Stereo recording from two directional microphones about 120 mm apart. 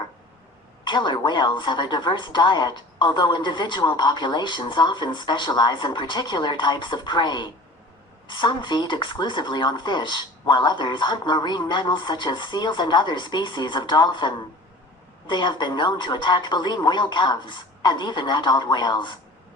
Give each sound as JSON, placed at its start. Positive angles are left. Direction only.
{"t": 0.9, "sound": "a woman's voice", "side_deg": 40}